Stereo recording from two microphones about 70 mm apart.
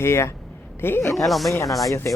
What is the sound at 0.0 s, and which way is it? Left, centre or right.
Speech, left.